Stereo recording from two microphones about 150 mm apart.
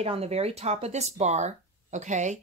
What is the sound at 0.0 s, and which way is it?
Speech, 45° right (ahead or behind).